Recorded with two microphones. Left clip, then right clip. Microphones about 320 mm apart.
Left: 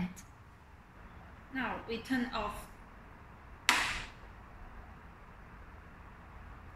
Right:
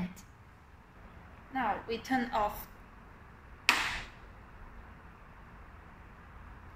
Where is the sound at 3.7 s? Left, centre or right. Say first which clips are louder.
Right 1 dB; centre.